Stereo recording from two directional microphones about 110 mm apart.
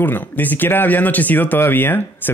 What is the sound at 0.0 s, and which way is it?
Speech, 15° left (ahead or behind).